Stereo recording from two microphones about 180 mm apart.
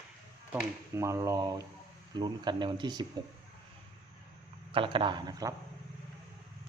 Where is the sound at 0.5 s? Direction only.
15° right (ahead or behind).